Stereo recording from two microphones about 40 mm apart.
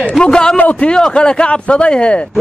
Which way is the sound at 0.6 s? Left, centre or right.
Left.